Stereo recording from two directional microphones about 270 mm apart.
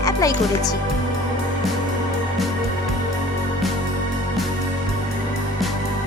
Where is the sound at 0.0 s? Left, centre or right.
Centre.